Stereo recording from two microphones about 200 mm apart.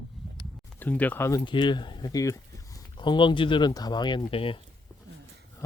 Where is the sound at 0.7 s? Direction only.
10° left (ahead or behind); by 4.6 s 25° left (ahead or behind).